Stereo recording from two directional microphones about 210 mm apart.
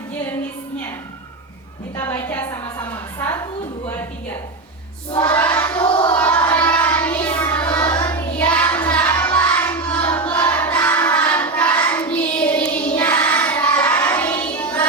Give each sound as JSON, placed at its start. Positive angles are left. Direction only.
{"t": 2.0, "sound": "a woman's voice", "side_deg": 10}
{"t": 5.1, "sound": "a sound", "side_deg": 10}
{"t": 5.6, "sound": "child singing", "side_deg": 10}
{"t": 5.9, "sound": "child singing", "side_deg": 25}
{"t": 6.1, "sound": "child singing", "side_deg": 10}
{"t": 7.7, "sound": "child singing", "side_deg": 20}